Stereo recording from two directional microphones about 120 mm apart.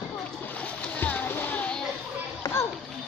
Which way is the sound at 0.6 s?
15° left (ahead or behind).